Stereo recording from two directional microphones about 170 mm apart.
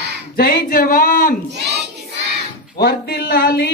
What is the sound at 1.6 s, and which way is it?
Child singing, 80° right.